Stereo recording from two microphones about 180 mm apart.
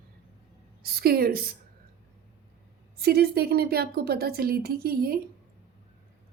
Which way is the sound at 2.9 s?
60° right (ahead or behind).